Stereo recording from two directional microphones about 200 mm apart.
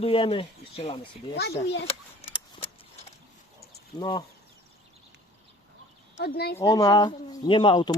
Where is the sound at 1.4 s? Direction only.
55° left (ahead or behind).